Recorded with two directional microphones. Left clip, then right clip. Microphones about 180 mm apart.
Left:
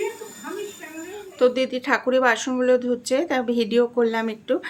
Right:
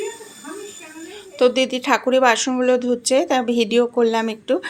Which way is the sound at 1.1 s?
15° right (ahead or behind).